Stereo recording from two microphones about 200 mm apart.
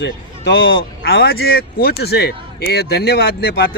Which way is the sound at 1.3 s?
50° left (ahead or behind).